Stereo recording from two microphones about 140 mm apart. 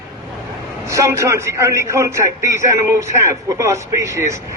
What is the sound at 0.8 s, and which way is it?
A man's voice, 20° right (ahead or behind).